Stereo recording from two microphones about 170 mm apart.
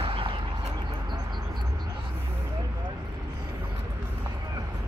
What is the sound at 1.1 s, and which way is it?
Bird, 25° right (ahead or behind).